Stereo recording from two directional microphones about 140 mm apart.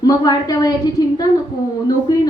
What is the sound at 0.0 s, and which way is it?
A woman's voice, 30° left (ahead or behind).